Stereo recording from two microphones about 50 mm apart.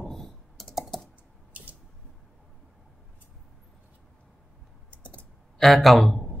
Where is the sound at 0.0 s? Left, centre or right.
Centre.